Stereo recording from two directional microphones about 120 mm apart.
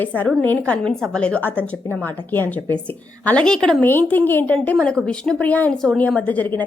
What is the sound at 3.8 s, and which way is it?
A woman's voice, 15° left (ahead or behind).